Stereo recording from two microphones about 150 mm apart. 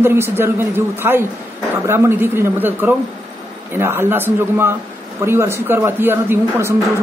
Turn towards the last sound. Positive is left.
turn(degrees=-15)  # may be behind; listen again after turning